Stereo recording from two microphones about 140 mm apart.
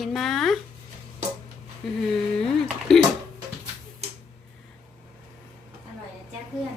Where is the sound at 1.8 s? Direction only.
Centre (ahead or behind).